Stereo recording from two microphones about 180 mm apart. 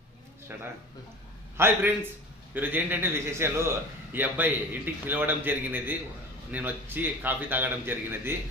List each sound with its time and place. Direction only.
0.5 s a man's voice: 10° right (ahead or behind)